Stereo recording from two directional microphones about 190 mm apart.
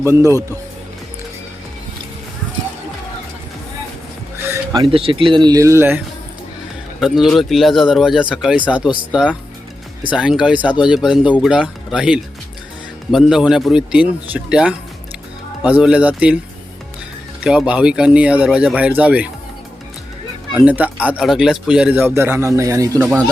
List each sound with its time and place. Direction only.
0.0 s speech: 15° right (ahead or behind)
4.5 s speech: 20° right (ahead or behind)
7.0 s speech: centre (ahead or behind)
17.4 s speech: 5° right (ahead or behind)
20.5 s speech: 5° right (ahead or behind)